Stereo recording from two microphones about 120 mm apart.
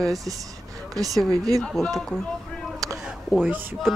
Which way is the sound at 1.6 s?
Centre (ahead or behind).